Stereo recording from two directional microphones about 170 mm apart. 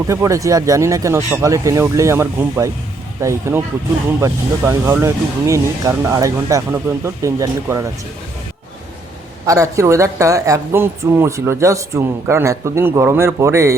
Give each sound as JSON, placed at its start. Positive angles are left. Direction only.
{"t": 0.1, "sound": "speech", "side_deg": -15}
{"t": 9.5, "sound": "speech", "side_deg": -20}